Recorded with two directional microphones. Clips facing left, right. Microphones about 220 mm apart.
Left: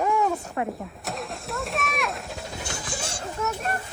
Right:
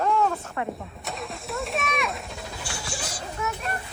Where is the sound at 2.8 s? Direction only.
25° left (ahead or behind).